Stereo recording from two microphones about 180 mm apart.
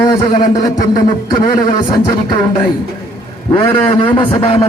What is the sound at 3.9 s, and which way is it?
Speech, 30° left (ahead or behind).